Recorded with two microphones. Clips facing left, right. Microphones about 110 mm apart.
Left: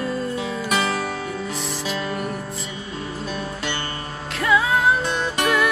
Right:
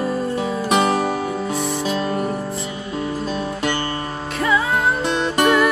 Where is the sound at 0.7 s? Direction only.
30° right (ahead or behind).